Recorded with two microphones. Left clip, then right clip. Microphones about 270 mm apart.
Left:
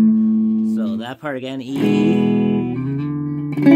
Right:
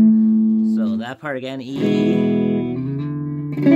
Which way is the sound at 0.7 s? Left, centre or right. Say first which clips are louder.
Right 1 dB; centre.